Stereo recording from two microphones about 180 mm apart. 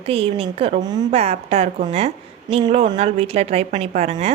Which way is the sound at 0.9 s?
20° right (ahead or behind).